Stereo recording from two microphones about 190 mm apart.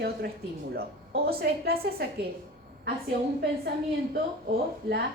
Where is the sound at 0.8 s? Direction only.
55° right (ahead or behind).